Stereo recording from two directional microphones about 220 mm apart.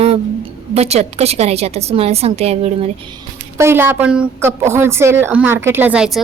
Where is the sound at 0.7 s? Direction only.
30° right (ahead or behind).